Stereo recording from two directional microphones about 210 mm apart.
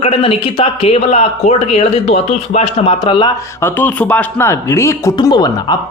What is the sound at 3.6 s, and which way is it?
Speech, 10° left (ahead or behind).